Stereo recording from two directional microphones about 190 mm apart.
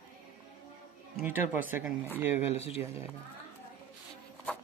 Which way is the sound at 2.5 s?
35° left (ahead or behind).